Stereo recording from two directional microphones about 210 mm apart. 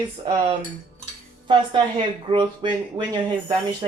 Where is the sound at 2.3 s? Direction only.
20° right (ahead or behind).